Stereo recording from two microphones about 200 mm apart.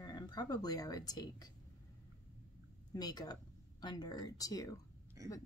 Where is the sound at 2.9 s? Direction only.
20° left (ahead or behind).